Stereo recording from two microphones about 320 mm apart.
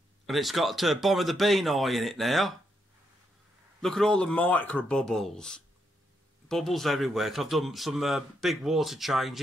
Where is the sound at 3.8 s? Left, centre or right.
Centre.